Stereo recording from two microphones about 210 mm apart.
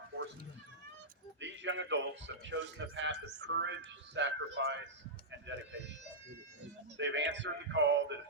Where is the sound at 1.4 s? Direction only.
60° right (ahead or behind).